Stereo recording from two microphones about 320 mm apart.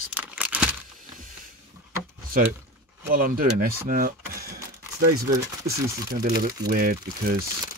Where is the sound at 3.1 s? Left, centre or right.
Right.